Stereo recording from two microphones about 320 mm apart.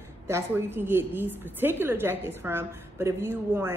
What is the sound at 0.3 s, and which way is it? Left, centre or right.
A woman's voice, centre.